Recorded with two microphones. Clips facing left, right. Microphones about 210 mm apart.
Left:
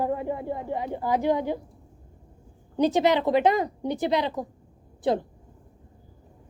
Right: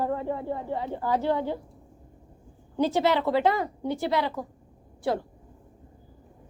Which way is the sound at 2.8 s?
15° left (ahead or behind).